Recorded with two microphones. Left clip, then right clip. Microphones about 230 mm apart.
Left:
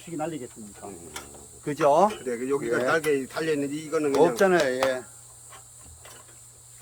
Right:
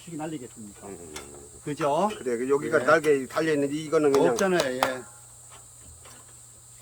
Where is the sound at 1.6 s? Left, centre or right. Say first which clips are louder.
Left 5 dB; centre.